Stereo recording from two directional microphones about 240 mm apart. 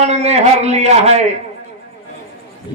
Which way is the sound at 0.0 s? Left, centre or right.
Right.